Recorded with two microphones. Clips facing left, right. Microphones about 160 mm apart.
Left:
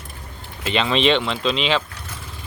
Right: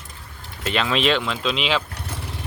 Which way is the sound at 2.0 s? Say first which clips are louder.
Right 4 dB; 70° right (ahead or behind).